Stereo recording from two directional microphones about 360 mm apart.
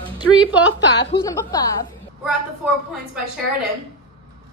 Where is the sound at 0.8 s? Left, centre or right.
Left.